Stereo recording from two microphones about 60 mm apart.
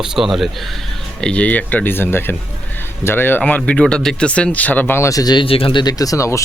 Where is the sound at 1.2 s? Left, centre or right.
Left.